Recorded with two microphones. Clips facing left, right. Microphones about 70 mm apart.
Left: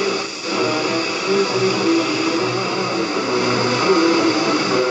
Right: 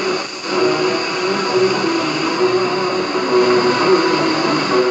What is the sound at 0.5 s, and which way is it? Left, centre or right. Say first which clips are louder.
Music: right 4 dB; right.